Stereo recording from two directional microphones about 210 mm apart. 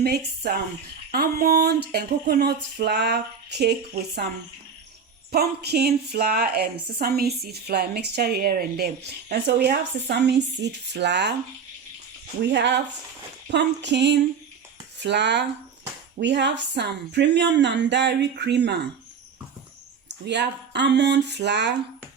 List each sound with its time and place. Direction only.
0.0 s a woman's voice: 50° right (ahead or behind)
5.3 s a woman's voice: 50° right (ahead or behind)
12.4 s speech: 55° right (ahead or behind)
20.1 s speech: 55° right (ahead or behind)